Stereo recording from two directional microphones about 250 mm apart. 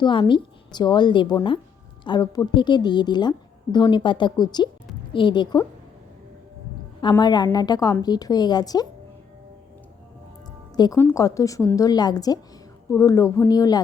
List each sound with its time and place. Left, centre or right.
0.0 s a woman's voice: centre
7.0 s a woman's voice: centre
10.8 s a woman's voice: centre